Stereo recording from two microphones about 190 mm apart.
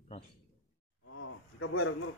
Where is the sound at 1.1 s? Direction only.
90° left.